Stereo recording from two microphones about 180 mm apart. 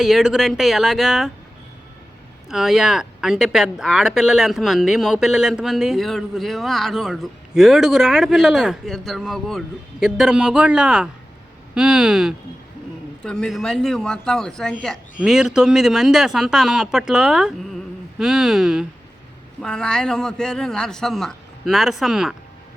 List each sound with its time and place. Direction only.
0.0 s speech: centre (ahead or behind)
2.5 s speech: centre (ahead or behind)